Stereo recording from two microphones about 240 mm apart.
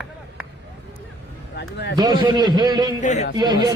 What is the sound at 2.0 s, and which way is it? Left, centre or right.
Speech, centre.